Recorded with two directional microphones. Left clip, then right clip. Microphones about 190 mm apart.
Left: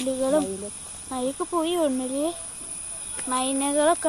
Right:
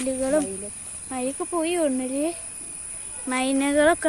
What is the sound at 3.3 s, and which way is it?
Speech, 35° right (ahead or behind).